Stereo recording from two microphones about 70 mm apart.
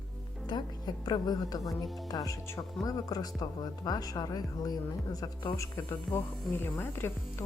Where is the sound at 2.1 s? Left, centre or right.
Left.